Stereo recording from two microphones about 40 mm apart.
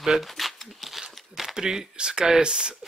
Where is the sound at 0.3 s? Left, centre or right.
Centre.